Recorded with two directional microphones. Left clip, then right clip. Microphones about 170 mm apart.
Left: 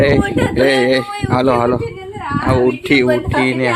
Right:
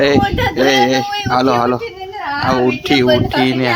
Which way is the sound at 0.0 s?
Centre (ahead or behind).